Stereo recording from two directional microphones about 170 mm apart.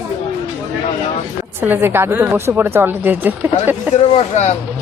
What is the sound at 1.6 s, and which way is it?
Speech, 15° right (ahead or behind).